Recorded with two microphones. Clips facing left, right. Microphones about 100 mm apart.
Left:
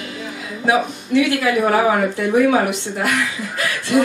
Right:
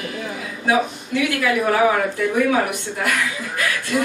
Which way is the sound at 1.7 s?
30° left (ahead or behind).